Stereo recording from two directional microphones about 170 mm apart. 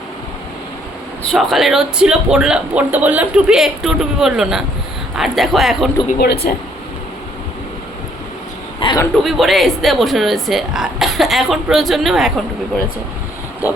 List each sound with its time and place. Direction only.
1.3 s speech: centre (ahead or behind)
6.1 s speech: 70° left (ahead or behind)
8.8 s a sound: 30° left (ahead or behind)
9.1 s speech: centre (ahead or behind)